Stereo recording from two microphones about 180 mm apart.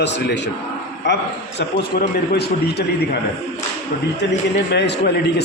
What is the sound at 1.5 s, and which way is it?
A man's voice, 65° left (ahead or behind).